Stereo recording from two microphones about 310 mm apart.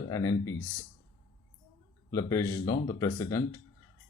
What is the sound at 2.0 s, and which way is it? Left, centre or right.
Speech, centre.